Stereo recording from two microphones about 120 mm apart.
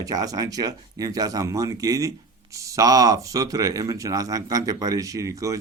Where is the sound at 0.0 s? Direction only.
30° right (ahead or behind).